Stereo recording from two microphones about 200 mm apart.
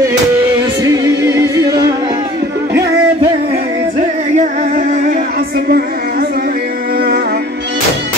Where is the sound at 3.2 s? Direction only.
35° right (ahead or behind).